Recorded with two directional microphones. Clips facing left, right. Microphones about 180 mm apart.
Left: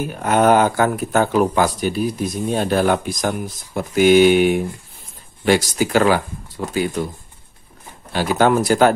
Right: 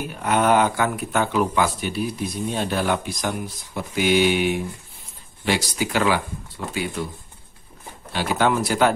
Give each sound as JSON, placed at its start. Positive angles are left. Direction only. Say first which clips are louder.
{"t": 0.1, "sound": "speech", "louder": "left 4 dB", "side_deg": 45}
{"t": 8.1, "sound": "speech", "louder": "left 5 dB", "side_deg": 45}